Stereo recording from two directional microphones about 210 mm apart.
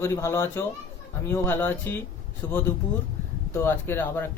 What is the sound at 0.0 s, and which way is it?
Speech, 10° left (ahead or behind).